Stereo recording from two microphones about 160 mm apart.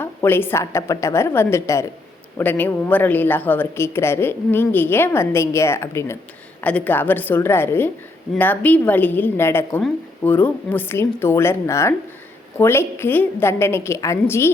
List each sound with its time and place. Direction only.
0.0 s speech: 15° left (ahead or behind)